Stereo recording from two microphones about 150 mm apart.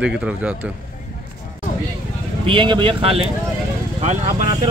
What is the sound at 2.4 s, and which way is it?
Speech, 35° right (ahead or behind).